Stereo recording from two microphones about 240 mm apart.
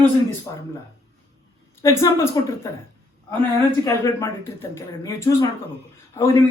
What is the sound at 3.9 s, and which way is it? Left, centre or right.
Speech, centre.